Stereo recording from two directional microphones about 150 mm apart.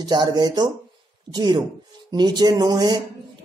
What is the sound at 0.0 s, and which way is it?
Speech, 30° right (ahead or behind).